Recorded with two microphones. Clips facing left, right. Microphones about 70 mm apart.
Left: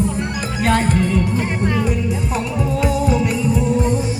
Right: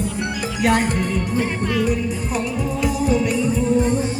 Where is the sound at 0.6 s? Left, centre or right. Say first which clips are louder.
Even; centre.